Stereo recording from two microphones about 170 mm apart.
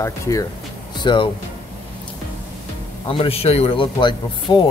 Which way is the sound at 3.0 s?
35° left (ahead or behind).